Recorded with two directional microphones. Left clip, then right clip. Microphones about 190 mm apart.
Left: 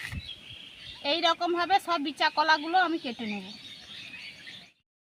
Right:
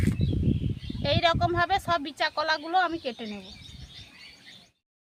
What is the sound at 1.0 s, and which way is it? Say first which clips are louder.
Speech: right 2 dB; 15° right (ahead or behind).